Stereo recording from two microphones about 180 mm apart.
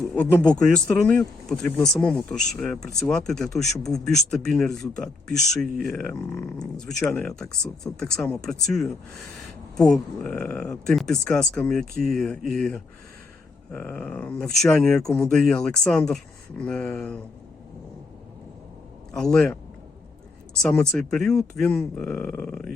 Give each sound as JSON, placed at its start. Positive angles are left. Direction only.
{"t": 0.0, "sound": "a sound", "side_deg": 0}
{"t": 0.7, "sound": "speech", "side_deg": 5}
{"t": 6.3, "sound": "speech", "side_deg": 15}
{"t": 6.7, "sound": "speech", "side_deg": 0}
{"t": 19.1, "sound": "speech", "side_deg": 5}
{"t": 20.6, "sound": "speech", "side_deg": 5}